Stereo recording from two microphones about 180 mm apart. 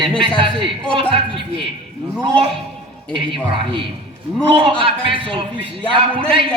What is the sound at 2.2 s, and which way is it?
Speech, 30° right (ahead or behind).